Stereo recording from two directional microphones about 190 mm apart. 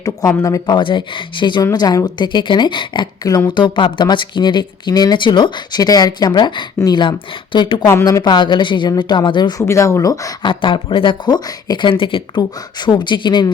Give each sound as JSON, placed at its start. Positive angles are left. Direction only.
{"t": 0.0, "sound": "speech", "side_deg": 15}